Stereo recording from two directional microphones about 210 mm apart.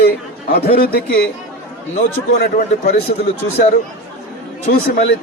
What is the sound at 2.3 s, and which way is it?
Speech, 45° left (ahead or behind).